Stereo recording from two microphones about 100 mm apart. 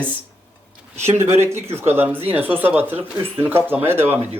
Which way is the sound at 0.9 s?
25° right (ahead or behind).